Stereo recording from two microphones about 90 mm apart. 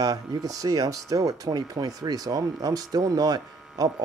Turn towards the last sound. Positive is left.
turn(degrees=-45)  # may be behind; listen again after turning